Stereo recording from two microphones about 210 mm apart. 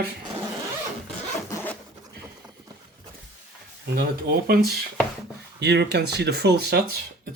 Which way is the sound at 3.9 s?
45° right (ahead or behind).